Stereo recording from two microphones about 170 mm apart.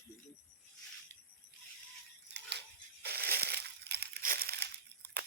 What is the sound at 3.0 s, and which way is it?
Crumpling, 70° right (ahead or behind).